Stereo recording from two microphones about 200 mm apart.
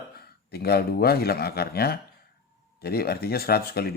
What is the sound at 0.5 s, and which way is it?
Speech, 50° left (ahead or behind).